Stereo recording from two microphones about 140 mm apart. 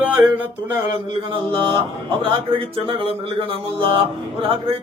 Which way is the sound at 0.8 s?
35° right (ahead or behind).